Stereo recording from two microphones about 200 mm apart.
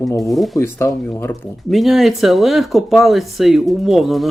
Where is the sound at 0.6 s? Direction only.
10° left (ahead or behind).